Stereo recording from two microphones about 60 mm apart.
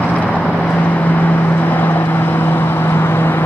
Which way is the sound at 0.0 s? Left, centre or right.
Left.